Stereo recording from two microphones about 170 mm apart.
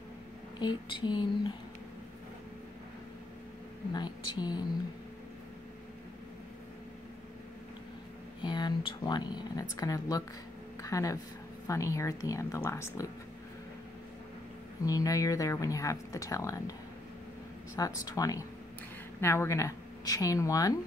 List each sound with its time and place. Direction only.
0.6 s speech: 25° left (ahead or behind)
3.9 s speech: 25° left (ahead or behind)
8.4 s speech: 25° left (ahead or behind)
14.9 s speech: 20° left (ahead or behind)
17.7 s speech: 20° left (ahead or behind)